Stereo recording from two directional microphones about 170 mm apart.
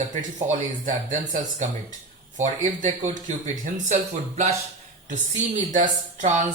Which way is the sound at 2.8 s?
50° right (ahead or behind).